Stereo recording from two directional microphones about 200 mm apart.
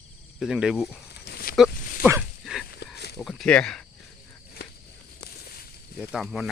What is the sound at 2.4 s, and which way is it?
Dog, centre (ahead or behind).